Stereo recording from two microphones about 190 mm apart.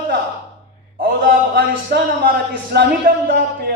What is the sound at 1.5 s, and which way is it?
A man's voice, 60° right (ahead or behind).